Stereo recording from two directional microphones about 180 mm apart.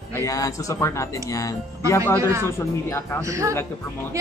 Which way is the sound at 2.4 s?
15° left (ahead or behind).